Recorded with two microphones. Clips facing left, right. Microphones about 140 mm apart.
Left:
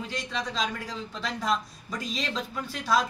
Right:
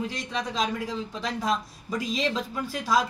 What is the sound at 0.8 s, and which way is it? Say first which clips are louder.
Speech: right 4 dB; 15° right (ahead or behind).